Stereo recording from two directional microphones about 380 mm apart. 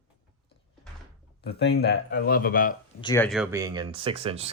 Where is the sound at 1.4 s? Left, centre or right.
Left.